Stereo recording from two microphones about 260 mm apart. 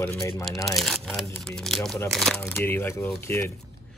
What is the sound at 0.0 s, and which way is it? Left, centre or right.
Speech, centre.